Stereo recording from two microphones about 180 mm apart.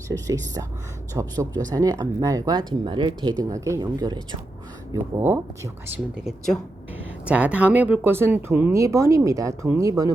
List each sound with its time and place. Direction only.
0.1 s speech: 20° right (ahead or behind)
5.2 s speech: 10° right (ahead or behind)
6.1 s speech: centre (ahead or behind); by 10.1 s 20° right (ahead or behind)